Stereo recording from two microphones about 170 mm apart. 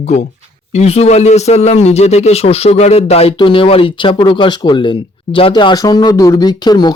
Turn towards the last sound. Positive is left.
turn(degrees=25)  # may be behind; listen again after turning